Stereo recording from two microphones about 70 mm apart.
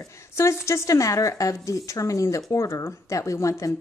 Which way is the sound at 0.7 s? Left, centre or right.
Left.